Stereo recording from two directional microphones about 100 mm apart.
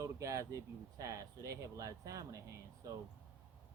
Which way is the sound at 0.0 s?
35° right (ahead or behind).